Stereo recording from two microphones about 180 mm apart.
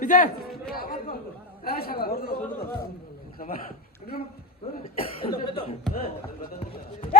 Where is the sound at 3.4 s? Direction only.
55° left (ahead or behind).